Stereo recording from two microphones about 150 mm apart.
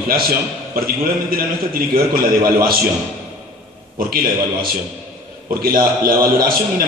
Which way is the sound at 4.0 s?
75° right (ahead or behind).